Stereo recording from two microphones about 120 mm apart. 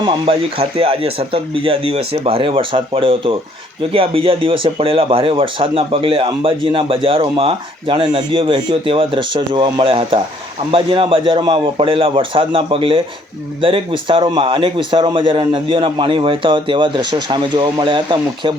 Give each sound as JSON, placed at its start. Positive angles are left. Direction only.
{"t": 0.0, "sound": "speech", "side_deg": -50}